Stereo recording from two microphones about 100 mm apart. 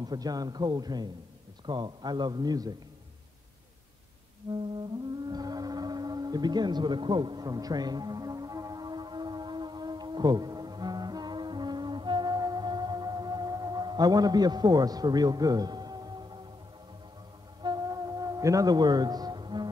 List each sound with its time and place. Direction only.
0.0 s a man's voice: 40° right (ahead or behind)
4.4 s music: 65° right (ahead or behind)
5.3 s a sound: 40° right (ahead or behind)
17.6 s music: 40° right (ahead or behind)